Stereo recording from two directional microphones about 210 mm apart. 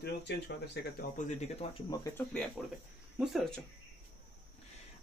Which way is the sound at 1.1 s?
35° left (ahead or behind).